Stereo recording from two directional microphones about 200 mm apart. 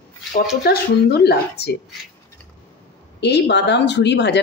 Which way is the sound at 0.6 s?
55° left (ahead or behind).